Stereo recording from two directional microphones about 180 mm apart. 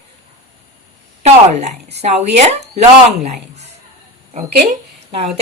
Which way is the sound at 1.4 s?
35° right (ahead or behind).